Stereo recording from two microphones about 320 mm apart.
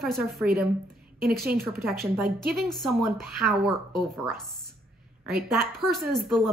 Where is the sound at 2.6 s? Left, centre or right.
Centre.